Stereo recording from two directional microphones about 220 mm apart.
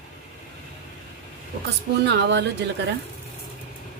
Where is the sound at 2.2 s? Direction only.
50° right (ahead or behind).